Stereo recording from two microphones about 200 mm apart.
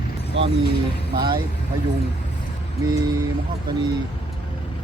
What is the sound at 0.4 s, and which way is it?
Speech, 65° right (ahead or behind).